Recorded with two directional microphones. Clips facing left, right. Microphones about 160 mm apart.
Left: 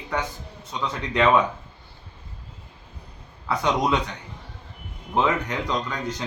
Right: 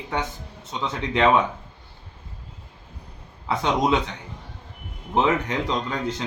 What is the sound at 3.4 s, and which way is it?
Speech, 20° right (ahead or behind).